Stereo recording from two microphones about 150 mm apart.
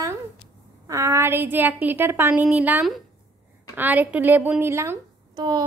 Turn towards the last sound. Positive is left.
turn(degrees=-25)  # may be behind; listen again after turning